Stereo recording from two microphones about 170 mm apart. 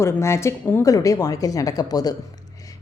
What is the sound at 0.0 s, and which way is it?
Speech, 15° left (ahead or behind).